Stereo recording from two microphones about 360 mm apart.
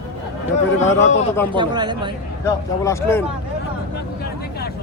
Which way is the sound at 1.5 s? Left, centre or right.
Centre.